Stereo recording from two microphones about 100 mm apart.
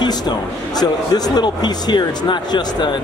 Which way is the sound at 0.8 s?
40° left (ahead or behind).